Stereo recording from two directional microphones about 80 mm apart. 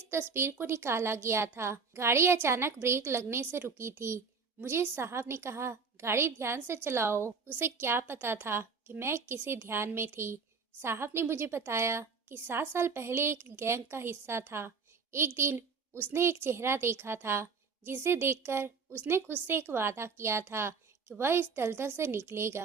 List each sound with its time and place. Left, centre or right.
0.1 s a woman's voice: right